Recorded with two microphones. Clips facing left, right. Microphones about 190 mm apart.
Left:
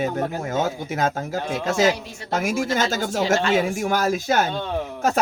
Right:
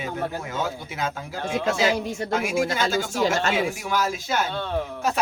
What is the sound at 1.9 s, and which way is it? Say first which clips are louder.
Speech: right 9 dB; 50° right (ahead or behind).